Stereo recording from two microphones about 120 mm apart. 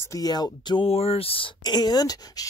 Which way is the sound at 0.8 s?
55° left (ahead or behind).